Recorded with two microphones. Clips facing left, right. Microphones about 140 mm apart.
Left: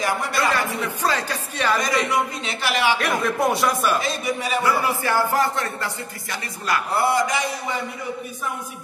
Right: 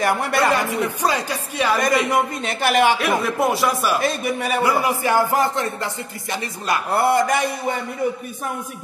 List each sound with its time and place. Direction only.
0.0 s a man's voice: 60° right (ahead or behind)
0.5 s speech: 15° right (ahead or behind)
1.8 s a man's voice: 55° right (ahead or behind)
3.0 s speech: centre (ahead or behind)
4.0 s a man's voice: 55° right (ahead or behind)
4.6 s speech: 15° right (ahead or behind)
6.9 s a man's voice: 55° right (ahead or behind)